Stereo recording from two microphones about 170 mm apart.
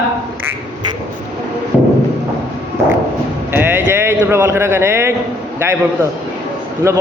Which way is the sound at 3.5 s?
10° right (ahead or behind).